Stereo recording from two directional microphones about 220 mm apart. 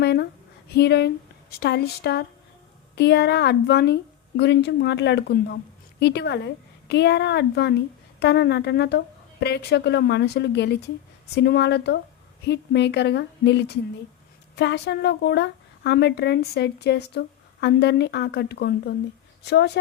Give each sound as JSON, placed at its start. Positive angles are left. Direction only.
{"t": 0.0, "sound": "a woman's voice", "side_deg": 45}